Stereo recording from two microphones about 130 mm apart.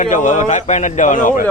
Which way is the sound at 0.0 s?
75° left (ahead or behind).